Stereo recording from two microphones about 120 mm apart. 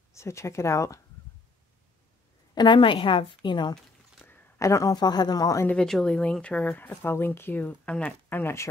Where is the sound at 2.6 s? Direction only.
40° left (ahead or behind).